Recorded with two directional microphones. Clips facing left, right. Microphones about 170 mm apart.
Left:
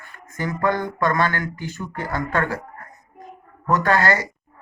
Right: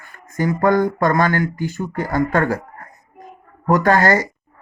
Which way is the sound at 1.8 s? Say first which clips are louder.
Right 6 dB; 40° right (ahead or behind).